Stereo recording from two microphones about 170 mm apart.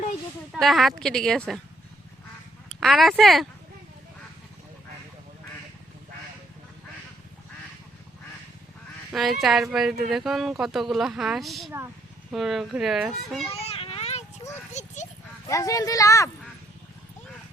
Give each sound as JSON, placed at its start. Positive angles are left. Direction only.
{"t": 0.5, "sound": "speech", "side_deg": 0}
{"t": 2.8, "sound": "speech", "side_deg": 0}
{"t": 9.1, "sound": "speech", "side_deg": 0}
{"t": 13.5, "sound": "a sound", "side_deg": 35}
{"t": 14.7, "sound": "horse", "side_deg": 45}
{"t": 15.4, "sound": "speech", "side_deg": 20}